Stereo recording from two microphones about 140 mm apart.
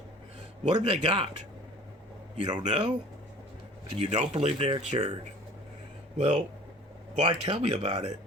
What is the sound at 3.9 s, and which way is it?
Speech, 55° right (ahead or behind).